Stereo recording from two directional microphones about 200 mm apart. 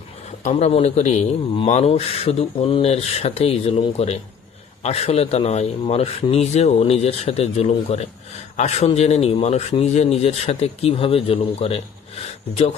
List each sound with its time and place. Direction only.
0.4 s speech: 35° left (ahead or behind)